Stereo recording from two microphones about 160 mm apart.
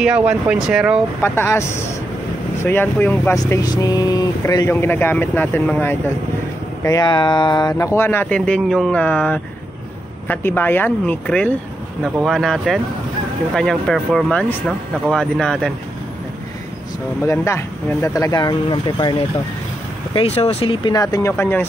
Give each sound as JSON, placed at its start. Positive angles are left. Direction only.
{"t": 0.0, "sound": "speech", "side_deg": -5}
{"t": 1.2, "sound": "speech", "side_deg": 15}
{"t": 6.8, "sound": "speech", "side_deg": 25}
{"t": 8.4, "sound": "speech", "side_deg": 0}
{"t": 17.3, "sound": "speech", "side_deg": 15}
{"t": 20.2, "sound": "speech", "side_deg": 40}